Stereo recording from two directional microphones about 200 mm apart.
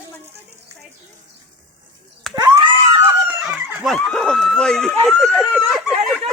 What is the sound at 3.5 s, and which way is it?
Speech, 10° right (ahead or behind).